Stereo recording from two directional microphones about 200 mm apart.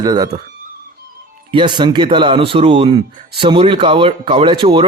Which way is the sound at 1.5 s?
25° right (ahead or behind).